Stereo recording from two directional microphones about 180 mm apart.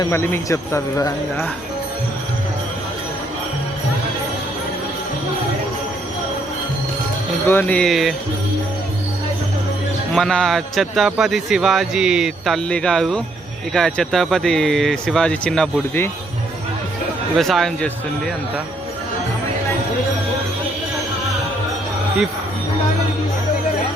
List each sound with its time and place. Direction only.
0.0 s speech: 15° left (ahead or behind)
7.4 s speech: 10° left (ahead or behind)
10.2 s a man's voice: 5° left (ahead or behind)
17.3 s a man's voice: centre (ahead or behind)